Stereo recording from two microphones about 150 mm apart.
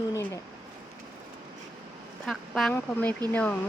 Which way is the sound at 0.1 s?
20° left (ahead or behind).